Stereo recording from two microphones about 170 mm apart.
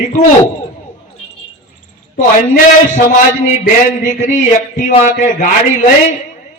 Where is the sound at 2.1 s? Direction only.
50° left (ahead or behind).